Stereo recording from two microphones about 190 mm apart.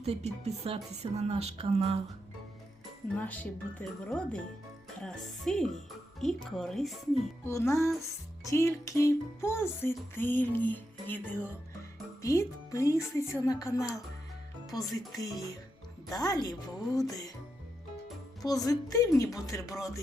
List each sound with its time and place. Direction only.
0.0 s speech: 35° right (ahead or behind)
3.2 s music: 10° left (ahead or behind)
4.9 s speech: 5° left (ahead or behind)
7.4 s music: 15° left (ahead or behind)
14.7 s speech: centre (ahead or behind)
15.2 s a woman's voice: 20° left (ahead or behind)
18.4 s music: 20° left (ahead or behind)